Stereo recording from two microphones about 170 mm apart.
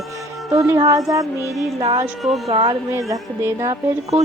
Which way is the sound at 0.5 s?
20° right (ahead or behind).